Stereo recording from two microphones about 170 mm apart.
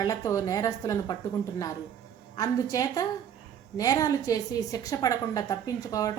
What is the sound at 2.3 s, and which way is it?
A woman's voice, 20° left (ahead or behind).